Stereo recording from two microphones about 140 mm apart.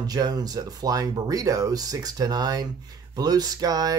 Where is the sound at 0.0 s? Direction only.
30° right (ahead or behind).